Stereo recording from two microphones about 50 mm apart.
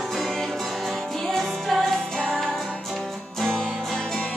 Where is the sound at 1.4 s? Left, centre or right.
Centre.